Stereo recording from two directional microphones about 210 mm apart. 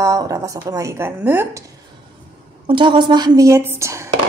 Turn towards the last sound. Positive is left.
turn(degrees=-15)  # may be behind; listen again after turning